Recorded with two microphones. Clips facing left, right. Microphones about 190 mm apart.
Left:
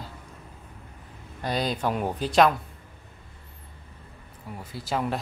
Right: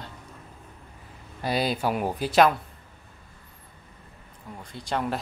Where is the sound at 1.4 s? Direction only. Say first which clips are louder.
Right 1 dB; 5° right (ahead or behind).